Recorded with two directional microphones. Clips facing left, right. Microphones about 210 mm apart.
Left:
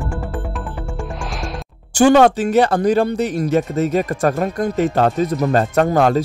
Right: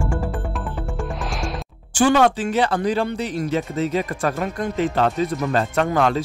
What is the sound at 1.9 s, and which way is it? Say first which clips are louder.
Speech: left 5 dB; 45° left (ahead or behind).